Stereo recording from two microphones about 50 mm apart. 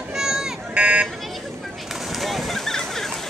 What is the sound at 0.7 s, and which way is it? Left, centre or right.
Vehicle, right.